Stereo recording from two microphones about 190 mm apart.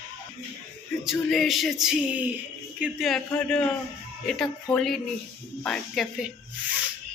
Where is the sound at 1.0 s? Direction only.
Centre (ahead or behind).